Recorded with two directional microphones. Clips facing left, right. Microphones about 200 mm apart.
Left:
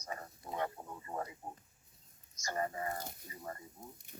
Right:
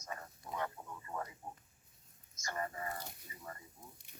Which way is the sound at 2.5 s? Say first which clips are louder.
Left 4 dB; 30° left (ahead or behind).